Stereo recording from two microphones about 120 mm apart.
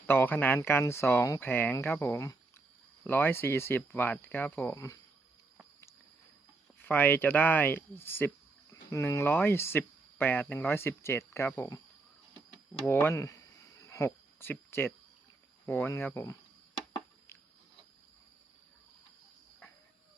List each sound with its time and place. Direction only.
0.1 s speech: 15° left (ahead or behind)
6.7 s speech: 15° left (ahead or behind)
12.8 s speech: 15° left (ahead or behind)
13.8 s cricket: 25° left (ahead or behind)
15.6 s speech: 15° left (ahead or behind)